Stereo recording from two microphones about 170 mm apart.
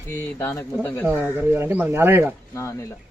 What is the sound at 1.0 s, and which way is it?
Speech, 10° right (ahead or behind).